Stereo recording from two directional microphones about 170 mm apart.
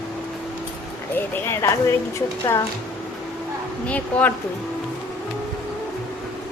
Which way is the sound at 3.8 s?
10° left (ahead or behind).